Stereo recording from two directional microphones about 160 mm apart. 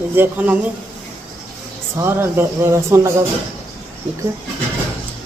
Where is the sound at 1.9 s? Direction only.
15° right (ahead or behind).